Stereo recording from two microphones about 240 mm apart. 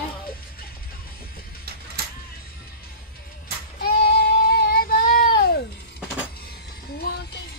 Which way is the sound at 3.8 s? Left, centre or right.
Left.